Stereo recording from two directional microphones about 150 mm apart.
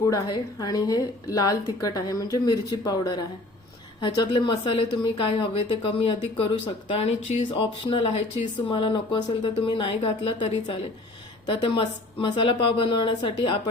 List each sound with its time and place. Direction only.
0.0 s a woman's voice: 25° left (ahead or behind)